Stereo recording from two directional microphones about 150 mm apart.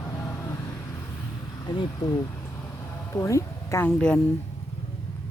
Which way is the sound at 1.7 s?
30° left (ahead or behind).